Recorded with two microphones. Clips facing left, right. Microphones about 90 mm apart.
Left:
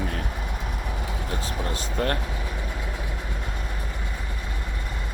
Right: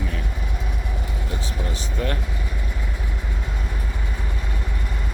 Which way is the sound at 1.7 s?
45° left (ahead or behind).